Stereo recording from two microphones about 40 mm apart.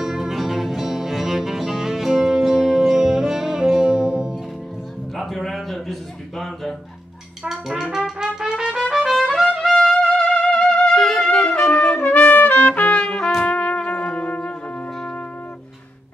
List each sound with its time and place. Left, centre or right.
0.0 s music: centre
5.1 s a sound: centre
7.4 s brass instrument: centre
8.4 s trumpet: centre
9.3 s trumpet: centre
10.3 s music: left
10.9 s music: centre
11.2 s trumpet: left
12.0 s trumpet: left
13.4 s music: left